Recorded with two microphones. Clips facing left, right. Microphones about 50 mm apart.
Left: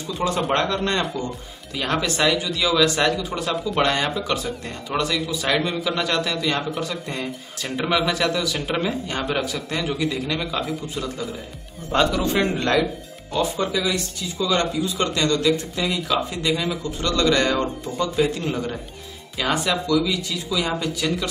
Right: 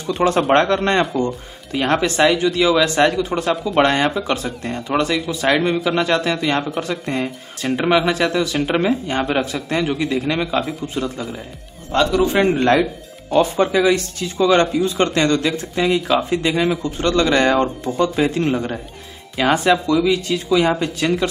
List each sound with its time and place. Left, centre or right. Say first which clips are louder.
0.0 s speech: right 6 dB; right
1.7 s speech: right 6 dB; right
7.6 s speech: right 6 dB; right
11.9 s speech: right 3 dB; centre
12.2 s a man's voice: right 6 dB; centre
12.5 s speech: right 5 dB; right
13.3 s speech: right 7 dB; right